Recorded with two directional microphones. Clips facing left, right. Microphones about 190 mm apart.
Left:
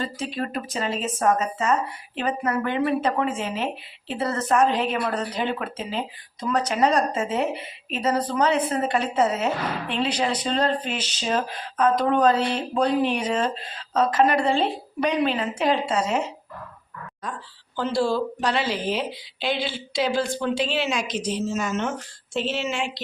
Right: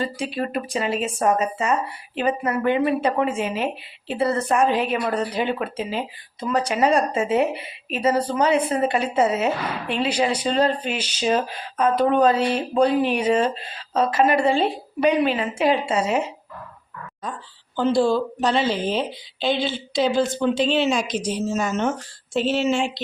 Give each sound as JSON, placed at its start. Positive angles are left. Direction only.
{"t": 0.2, "sound": "speech", "side_deg": -15}
{"t": 17.7, "sound": "speech", "side_deg": -20}
{"t": 21.1, "sound": "speech", "side_deg": -10}
{"t": 21.5, "sound": "speech", "side_deg": -40}